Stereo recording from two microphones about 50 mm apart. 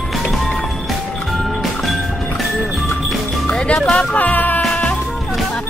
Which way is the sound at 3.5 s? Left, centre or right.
Centre.